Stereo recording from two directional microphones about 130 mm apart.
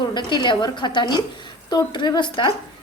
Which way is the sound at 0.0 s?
35° left (ahead or behind).